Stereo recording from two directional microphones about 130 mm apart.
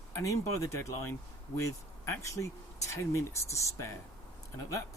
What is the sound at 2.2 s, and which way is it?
Speech, 25° left (ahead or behind).